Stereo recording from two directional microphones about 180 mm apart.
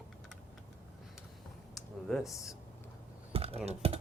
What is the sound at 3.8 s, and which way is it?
Speech, 35° right (ahead or behind).